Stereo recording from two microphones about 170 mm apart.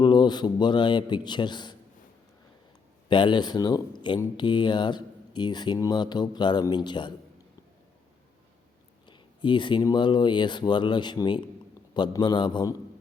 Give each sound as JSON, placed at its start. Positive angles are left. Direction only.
{"t": 0.0, "sound": "speech", "side_deg": 25}
{"t": 3.1, "sound": "speech", "side_deg": 25}
{"t": 9.0, "sound": "speech", "side_deg": 25}